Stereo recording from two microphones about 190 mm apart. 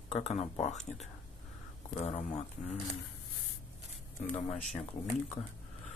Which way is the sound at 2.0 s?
35° left (ahead or behind).